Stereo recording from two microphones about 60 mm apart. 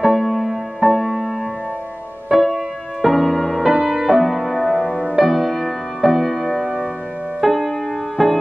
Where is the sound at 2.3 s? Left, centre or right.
Centre.